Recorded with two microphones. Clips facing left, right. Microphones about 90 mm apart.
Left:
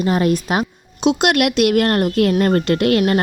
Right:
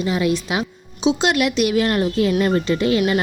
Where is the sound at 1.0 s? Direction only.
65° left (ahead or behind).